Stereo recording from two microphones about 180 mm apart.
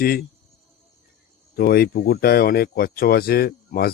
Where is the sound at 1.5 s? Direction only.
60° left (ahead or behind).